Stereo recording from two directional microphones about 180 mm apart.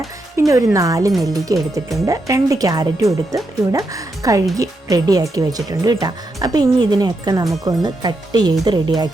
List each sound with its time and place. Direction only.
0.3 s speech: 15° right (ahead or behind)